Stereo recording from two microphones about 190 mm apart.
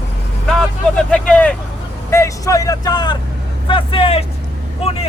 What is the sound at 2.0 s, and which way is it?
Vehicle, 15° left (ahead or behind).